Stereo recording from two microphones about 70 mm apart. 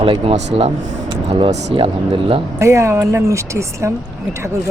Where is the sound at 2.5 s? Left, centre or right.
Right.